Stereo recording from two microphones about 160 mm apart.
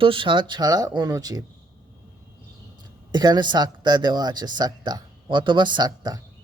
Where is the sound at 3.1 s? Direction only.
25° right (ahead or behind).